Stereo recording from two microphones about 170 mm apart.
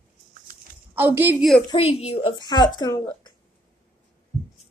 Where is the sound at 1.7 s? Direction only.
35° left (ahead or behind).